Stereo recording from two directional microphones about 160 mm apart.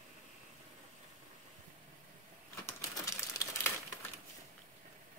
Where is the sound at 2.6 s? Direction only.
20° left (ahead or behind).